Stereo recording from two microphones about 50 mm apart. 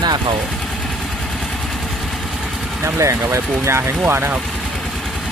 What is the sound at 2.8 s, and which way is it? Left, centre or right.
Speech, right.